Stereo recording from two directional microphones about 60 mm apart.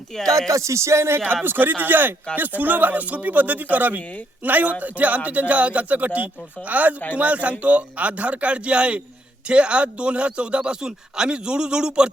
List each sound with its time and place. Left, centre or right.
0.3 s speech: right
1.5 s a man's voice: right; by 12.1 s centre